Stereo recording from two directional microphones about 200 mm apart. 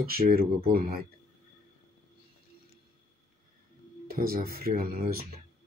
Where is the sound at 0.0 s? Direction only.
50° right (ahead or behind).